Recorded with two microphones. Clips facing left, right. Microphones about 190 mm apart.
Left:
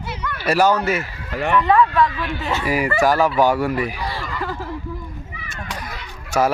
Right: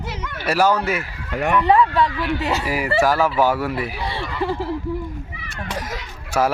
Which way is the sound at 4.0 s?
25° right (ahead or behind).